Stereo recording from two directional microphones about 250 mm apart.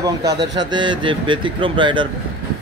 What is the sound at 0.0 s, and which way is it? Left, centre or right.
Speech, centre.